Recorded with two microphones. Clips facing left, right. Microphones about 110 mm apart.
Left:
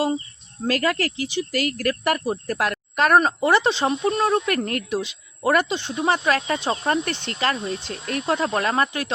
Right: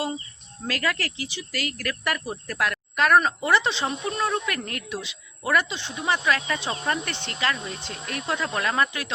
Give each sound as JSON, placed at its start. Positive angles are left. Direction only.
{"t": 0.7, "sound": "speech", "side_deg": 40}
{"t": 2.2, "sound": "speech", "side_deg": 30}
{"t": 2.6, "sound": "speech", "side_deg": 40}